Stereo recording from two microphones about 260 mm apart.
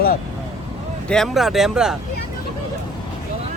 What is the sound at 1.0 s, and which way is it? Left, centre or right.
Speech, centre.